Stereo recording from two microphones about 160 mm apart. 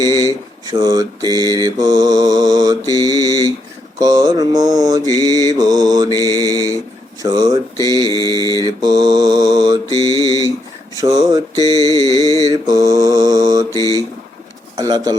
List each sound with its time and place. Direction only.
0.0 s a sound: 25° right (ahead or behind)
0.6 s mantra: 25° right (ahead or behind)
10.2 s a sound: 25° right (ahead or behind)
10.9 s mantra: 20° right (ahead or behind)
11.9 s music: 20° left (ahead or behind)
12.6 s mantra: 20° right (ahead or behind)
13.7 s mantra: 20° left (ahead or behind)
14.8 s mantra: 25° right (ahead or behind)